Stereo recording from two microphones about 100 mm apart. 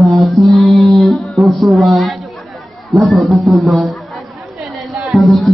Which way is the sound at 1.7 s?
Centre (ahead or behind).